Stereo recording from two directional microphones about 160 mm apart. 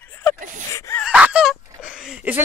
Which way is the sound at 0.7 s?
20° left (ahead or behind).